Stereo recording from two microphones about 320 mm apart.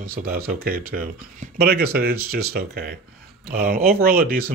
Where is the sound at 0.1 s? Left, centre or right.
Right.